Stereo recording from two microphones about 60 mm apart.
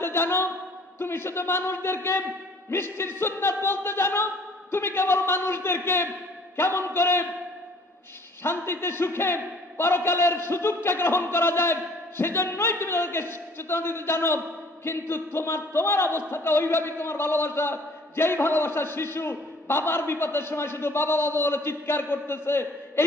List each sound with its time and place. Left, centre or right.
0.0 s a sound: left
0.9 s a man's voice: left
8.4 s a man's voice: left